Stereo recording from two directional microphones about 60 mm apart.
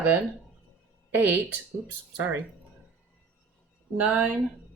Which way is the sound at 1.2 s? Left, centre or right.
Right.